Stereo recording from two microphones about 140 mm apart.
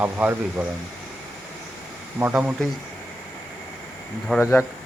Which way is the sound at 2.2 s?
15° right (ahead or behind).